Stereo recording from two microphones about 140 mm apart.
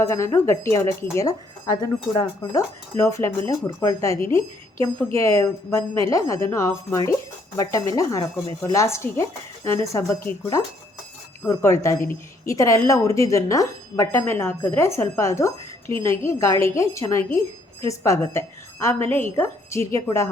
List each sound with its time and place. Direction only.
0.1 s speech: 20° left (ahead or behind)
2.9 s speech: 20° left (ahead or behind)
11.4 s speech: 20° left (ahead or behind)